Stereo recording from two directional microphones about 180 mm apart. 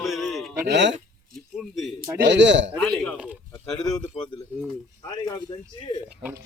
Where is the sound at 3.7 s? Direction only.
Centre (ahead or behind).